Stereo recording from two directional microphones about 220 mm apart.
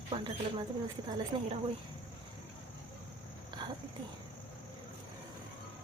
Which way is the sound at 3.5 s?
20° right (ahead or behind).